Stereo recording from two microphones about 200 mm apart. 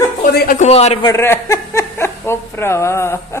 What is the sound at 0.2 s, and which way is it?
Speech, 45° left (ahead or behind).